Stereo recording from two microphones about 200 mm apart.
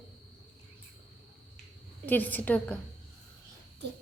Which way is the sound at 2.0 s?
10° left (ahead or behind).